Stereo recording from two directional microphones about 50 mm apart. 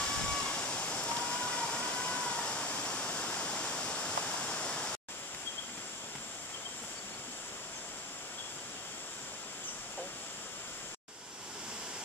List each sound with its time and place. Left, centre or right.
0.0 s waterfall: left